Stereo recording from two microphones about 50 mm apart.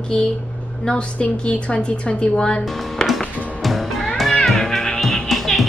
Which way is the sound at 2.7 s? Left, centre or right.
Centre.